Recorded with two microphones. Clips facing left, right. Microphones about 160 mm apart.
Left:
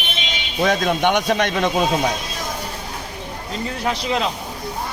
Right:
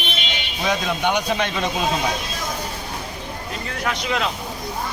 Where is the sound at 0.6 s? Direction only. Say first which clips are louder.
Left 5 dB; 55° left (ahead or behind).